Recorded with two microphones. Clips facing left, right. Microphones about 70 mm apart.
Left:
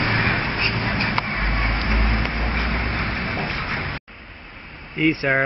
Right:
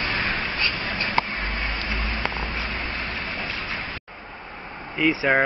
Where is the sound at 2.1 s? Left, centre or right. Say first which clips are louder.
Left 3 dB; left.